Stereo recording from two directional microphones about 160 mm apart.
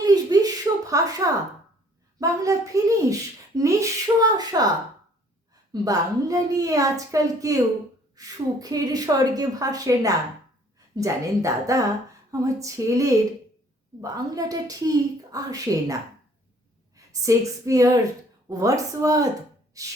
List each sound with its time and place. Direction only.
0.0 s a sound: 25° right (ahead or behind)
2.1 s speech: 20° right (ahead or behind)
5.7 s a woman's voice: 20° right (ahead or behind)